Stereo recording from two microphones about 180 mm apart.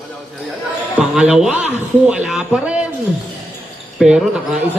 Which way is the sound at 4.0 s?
Centre (ahead or behind).